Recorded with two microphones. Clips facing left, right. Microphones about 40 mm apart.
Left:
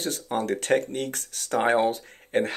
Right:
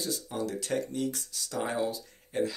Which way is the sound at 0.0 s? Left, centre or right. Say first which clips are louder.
Left 5 dB; left.